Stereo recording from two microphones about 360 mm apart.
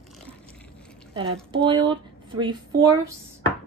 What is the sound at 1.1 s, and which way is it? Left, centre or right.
Speech, centre.